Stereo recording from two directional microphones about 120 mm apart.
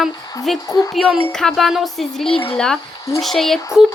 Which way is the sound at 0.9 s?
Centre (ahead or behind).